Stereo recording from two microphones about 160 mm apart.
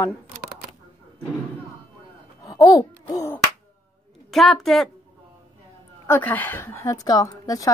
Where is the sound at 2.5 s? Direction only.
20° left (ahead or behind).